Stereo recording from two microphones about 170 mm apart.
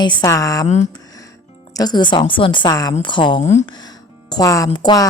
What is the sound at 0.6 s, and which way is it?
Speech, 45° left (ahead or behind).